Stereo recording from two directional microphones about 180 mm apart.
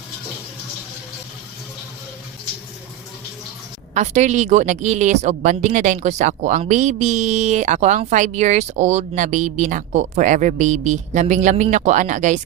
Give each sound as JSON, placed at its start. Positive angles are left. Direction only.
{"t": 3.9, "sound": "a woman's voice", "side_deg": -40}